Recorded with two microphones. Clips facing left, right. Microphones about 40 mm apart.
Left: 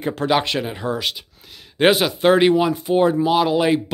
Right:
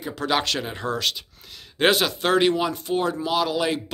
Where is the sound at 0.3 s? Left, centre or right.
Centre.